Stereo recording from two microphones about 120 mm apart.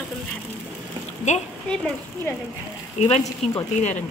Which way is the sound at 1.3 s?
80° left.